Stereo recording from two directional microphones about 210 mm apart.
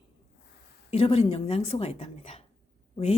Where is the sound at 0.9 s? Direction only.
30° left (ahead or behind).